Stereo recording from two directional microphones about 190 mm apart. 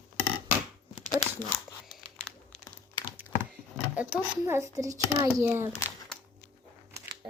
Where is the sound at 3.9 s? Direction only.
10° right (ahead or behind).